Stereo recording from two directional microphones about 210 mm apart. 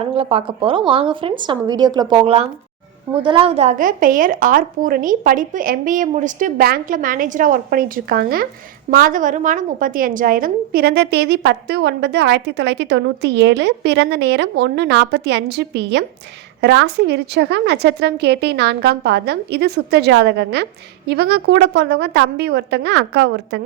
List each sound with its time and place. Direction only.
0.1 s a woman's voice: 25° right (ahead or behind); by 23.6 s 55° right (ahead or behind)